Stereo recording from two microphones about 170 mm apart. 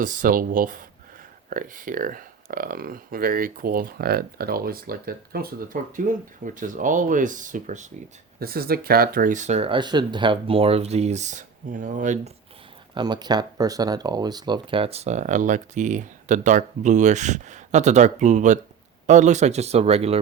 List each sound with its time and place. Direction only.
0.0 s speech: 55° right (ahead or behind)
8.4 s speech: 60° right (ahead or behind); by 12.3 s 45° right (ahead or behind)
12.9 s speech: 25° right (ahead or behind)